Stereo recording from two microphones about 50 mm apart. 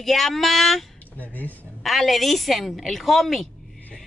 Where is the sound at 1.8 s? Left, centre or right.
Centre.